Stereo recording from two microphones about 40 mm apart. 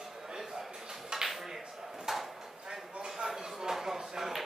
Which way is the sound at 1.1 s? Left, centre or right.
Centre.